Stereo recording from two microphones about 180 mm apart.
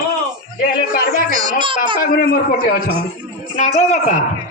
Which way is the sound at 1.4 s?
25° right (ahead or behind).